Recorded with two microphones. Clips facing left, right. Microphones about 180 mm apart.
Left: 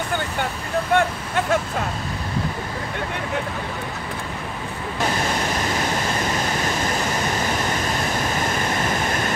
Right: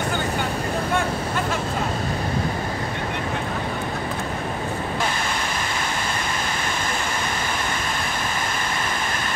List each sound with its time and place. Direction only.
0.9 s vehicle: 70° left (ahead or behind)